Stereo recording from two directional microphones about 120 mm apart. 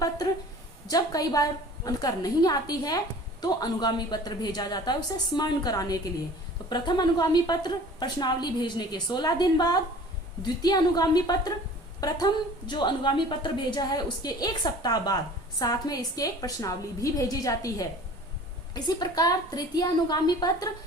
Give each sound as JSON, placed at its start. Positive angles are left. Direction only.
{"t": 0.9, "sound": "a woman's voice", "side_deg": 30}